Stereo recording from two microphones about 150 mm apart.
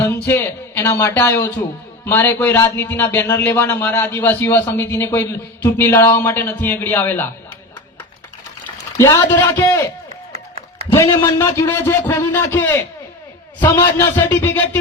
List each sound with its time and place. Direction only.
0.0 s a man's voice: 15° left (ahead or behind)
9.0 s speech: 20° left (ahead or behind)
10.3 s a sound: 45° right (ahead or behind)
10.9 s a man's voice: 25° left (ahead or behind)